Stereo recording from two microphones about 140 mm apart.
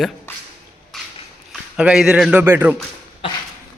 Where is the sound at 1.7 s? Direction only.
5° right (ahead or behind).